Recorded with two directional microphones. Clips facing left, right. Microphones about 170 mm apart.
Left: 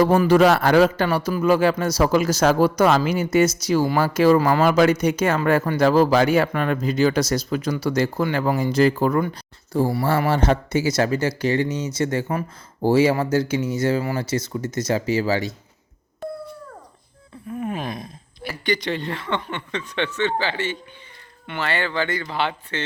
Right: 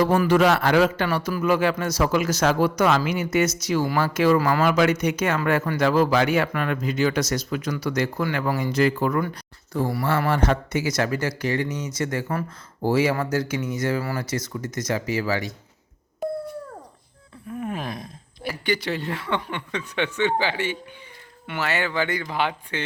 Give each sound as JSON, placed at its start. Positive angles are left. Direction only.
{"t": 0.0, "sound": "speech", "side_deg": 35}
{"t": 1.0, "sound": "speech", "side_deg": 30}
{"t": 17.6, "sound": "a sound", "side_deg": 0}
{"t": 18.4, "sound": "speech", "side_deg": -10}